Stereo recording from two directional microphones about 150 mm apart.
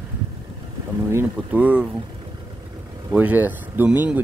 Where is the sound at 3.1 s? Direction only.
10° right (ahead or behind).